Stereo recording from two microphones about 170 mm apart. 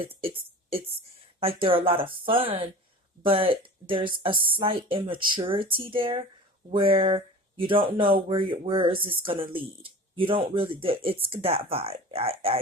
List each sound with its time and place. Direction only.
0.0 s a woman's voice: 30° right (ahead or behind)